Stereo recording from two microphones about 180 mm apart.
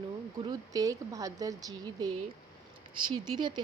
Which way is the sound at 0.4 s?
20° right (ahead or behind).